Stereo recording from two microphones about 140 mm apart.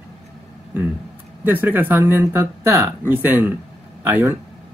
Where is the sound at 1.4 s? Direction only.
15° right (ahead or behind).